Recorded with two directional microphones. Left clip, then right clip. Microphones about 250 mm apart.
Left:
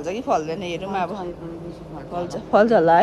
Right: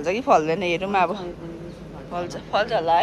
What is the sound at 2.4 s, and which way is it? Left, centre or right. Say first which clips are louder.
Speech: left 6 dB; left.